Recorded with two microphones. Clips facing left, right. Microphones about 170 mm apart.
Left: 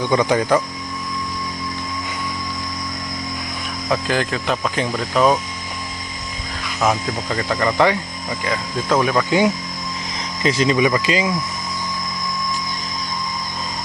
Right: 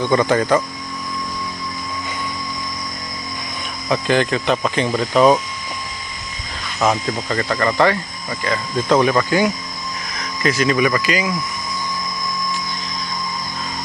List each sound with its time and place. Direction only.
0.0 s speech: 10° left (ahead or behind)
3.8 s speech: centre (ahead or behind)
6.7 s speech: centre (ahead or behind)
7.3 s speech: 10° left (ahead or behind)
10.2 s speech: 25° left (ahead or behind)